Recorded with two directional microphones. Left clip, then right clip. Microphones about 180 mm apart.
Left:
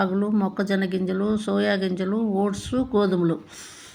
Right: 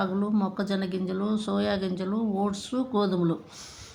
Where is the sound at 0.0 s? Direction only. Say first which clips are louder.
Left 4 dB; 20° left (ahead or behind).